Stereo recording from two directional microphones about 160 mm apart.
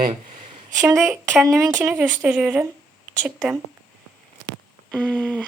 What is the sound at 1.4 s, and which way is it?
Speech, 20° right (ahead or behind).